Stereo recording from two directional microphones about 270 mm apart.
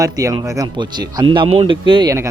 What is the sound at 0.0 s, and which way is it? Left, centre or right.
Speech, centre.